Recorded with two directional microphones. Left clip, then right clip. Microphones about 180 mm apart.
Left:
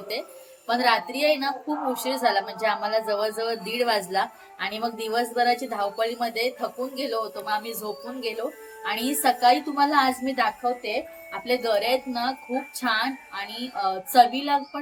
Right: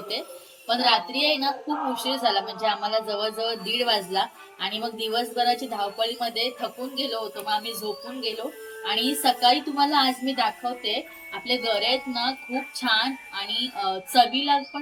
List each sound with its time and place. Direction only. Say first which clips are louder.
0.7 s a woman's voice: even; 15° left (ahead or behind)